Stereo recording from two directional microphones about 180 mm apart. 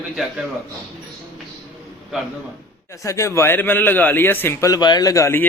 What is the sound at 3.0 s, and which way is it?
Speech, 15° left (ahead or behind).